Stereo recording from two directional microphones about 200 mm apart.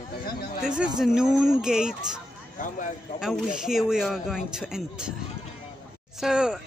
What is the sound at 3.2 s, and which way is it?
Speech, centre (ahead or behind).